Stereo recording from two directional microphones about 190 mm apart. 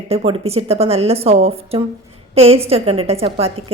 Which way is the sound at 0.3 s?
35° right (ahead or behind).